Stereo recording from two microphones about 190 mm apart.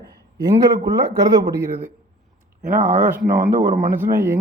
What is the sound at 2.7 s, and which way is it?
Speech, 40° right (ahead or behind).